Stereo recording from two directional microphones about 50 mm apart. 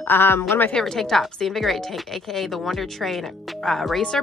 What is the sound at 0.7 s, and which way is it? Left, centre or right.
A woman's voice, centre.